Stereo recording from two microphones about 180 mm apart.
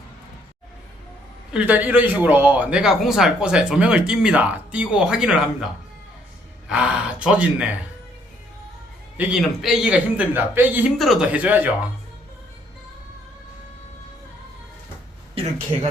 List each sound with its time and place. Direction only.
1.5 s speech: 10° right (ahead or behind)
6.7 s speech: 5° right (ahead or behind)
9.1 s a man's voice: 5° right (ahead or behind)
15.7 s speech: 30° right (ahead or behind)